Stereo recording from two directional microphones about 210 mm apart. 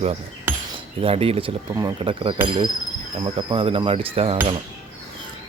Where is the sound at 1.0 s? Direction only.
30° right (ahead or behind).